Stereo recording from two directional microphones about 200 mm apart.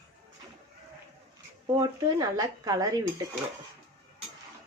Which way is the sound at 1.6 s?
20° right (ahead or behind).